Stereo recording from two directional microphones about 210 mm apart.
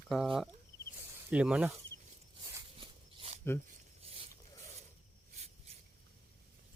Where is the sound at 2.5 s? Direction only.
20° right (ahead or behind).